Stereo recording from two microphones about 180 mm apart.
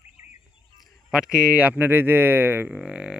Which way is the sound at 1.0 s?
5° right (ahead or behind).